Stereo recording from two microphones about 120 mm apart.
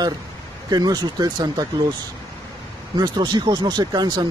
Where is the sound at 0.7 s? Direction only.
35° right (ahead or behind).